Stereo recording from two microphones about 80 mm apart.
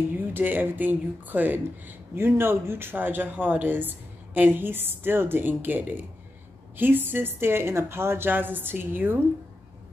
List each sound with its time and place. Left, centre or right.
0.3 s speech: right